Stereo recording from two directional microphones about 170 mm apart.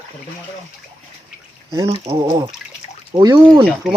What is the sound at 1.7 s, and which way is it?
Speech, 20° right (ahead or behind).